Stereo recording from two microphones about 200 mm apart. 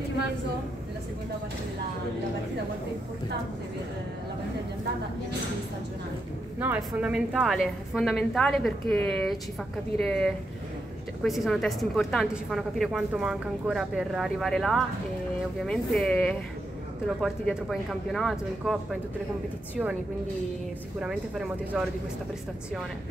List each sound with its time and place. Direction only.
6.6 s a woman's voice: 5° right (ahead or behind)
21.0 s a woman's voice: 5° right (ahead or behind)